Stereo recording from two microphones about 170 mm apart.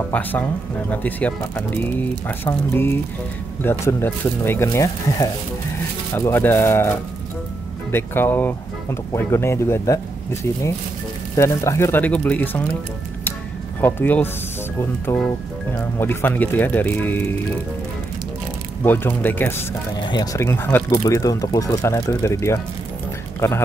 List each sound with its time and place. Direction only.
0.1 s speech: 10° left (ahead or behind)
13.7 s speech: 10° left (ahead or behind)
18.9 s speech: 10° left (ahead or behind)
20.0 s speech: 25° left (ahead or behind)
20.3 s speech: 15° left (ahead or behind)